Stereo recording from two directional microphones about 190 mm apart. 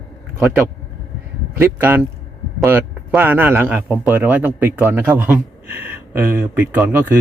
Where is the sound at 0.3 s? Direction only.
5° right (ahead or behind).